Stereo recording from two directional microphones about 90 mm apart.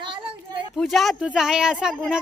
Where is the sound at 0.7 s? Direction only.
Centre (ahead or behind).